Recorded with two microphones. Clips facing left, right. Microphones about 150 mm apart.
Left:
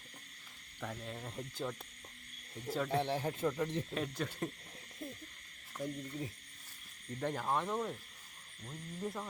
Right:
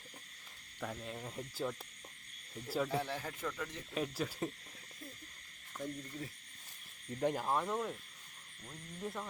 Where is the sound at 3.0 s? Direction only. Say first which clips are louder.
Left 5 dB; 25° left (ahead or behind).